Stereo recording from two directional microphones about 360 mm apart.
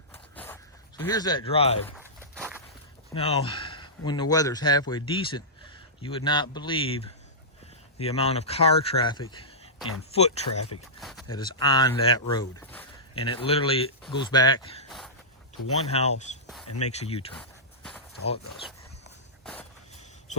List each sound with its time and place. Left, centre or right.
0.1 s zipper: centre
2.0 s walk: centre
3.2 s speech: centre
11.0 s a sound: centre
11.3 s speech: centre
14.8 s a sound: centre
15.9 s speech: centre
16.6 s speech: left
16.9 s speech: centre